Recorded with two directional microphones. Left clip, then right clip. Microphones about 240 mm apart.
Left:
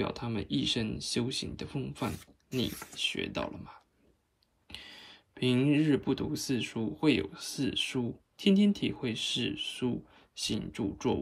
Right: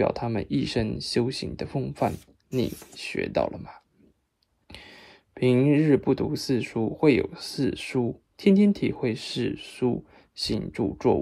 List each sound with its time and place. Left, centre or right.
0.0 s speech: centre
2.1 s speech: centre
3.0 s speech: centre
4.6 s a sound: centre
5.4 s speech: centre
9.4 s speech: centre
9.8 s speech: centre